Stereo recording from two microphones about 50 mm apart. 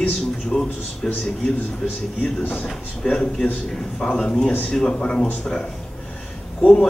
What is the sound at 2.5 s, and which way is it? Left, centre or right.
A man's voice, centre.